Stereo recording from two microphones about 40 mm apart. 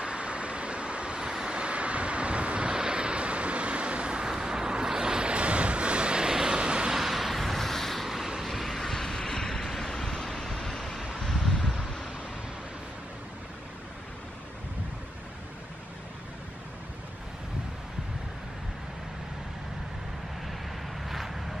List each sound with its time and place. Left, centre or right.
0.0 s vehicle: right
6.9 s vehicle: centre
9.6 s vehicle: centre
9.9 s vehicle: centre
10.2 s vehicle: centre
11.1 s wind: centre
21.1 s vehicle: centre